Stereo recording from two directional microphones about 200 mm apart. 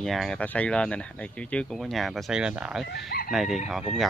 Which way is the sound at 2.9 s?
60° left (ahead or behind).